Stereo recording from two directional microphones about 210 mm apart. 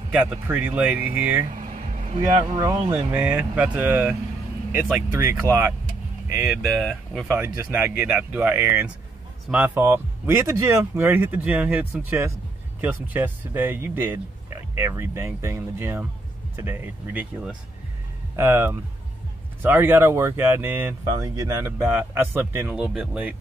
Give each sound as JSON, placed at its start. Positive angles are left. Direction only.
{"t": 0.1, "sound": "speech", "side_deg": -5}
{"t": 1.6, "sound": "vehicle", "side_deg": -35}
{"t": 2.5, "sound": "speech", "side_deg": -15}
{"t": 5.1, "sound": "speech", "side_deg": -15}
{"t": 6.3, "sound": "speech", "side_deg": 0}
{"t": 7.3, "sound": "speech", "side_deg": -10}